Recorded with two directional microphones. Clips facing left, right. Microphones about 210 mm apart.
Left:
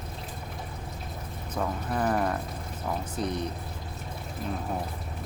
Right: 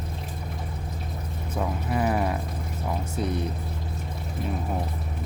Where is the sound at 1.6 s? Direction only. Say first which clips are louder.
Right 2 dB; 5° right (ahead or behind).